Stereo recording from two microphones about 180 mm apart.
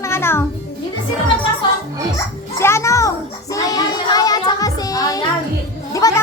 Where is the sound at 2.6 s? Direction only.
15° left (ahead or behind).